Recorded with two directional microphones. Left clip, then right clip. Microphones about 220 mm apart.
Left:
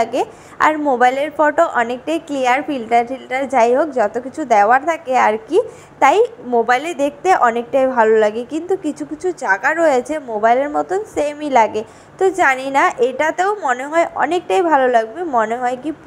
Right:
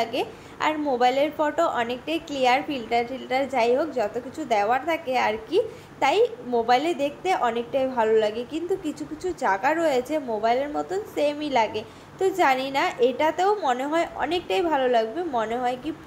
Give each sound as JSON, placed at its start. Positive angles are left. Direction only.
{"t": 0.0, "sound": "a woman's voice", "side_deg": 25}